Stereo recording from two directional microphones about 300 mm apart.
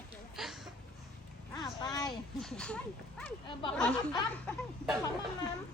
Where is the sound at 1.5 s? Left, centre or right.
Centre.